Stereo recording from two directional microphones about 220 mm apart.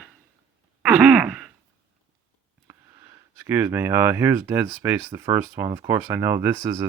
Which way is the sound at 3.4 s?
10° right (ahead or behind).